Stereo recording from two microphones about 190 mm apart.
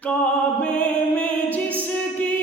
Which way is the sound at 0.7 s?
5° left (ahead or behind).